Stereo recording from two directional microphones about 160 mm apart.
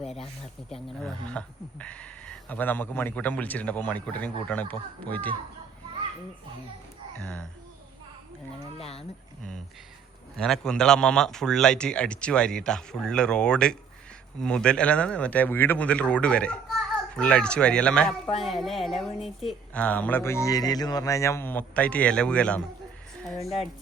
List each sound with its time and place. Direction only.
0.7 s speech: 5° left (ahead or behind)
7.2 s a man's voice: 5° left (ahead or behind)
8.8 s speech: 40° left (ahead or behind)
10.3 s a man's voice: 5° left (ahead or behind)